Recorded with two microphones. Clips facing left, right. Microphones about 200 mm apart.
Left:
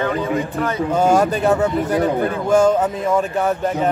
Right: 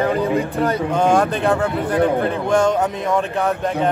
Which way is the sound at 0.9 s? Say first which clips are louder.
Left 3 dB; 5° left (ahead or behind).